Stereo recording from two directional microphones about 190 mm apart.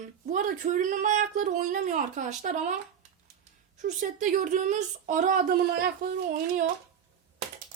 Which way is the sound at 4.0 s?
40° right (ahead or behind).